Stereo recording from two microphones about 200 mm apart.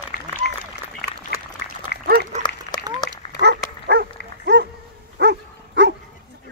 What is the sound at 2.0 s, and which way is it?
Dog, 50° right (ahead or behind).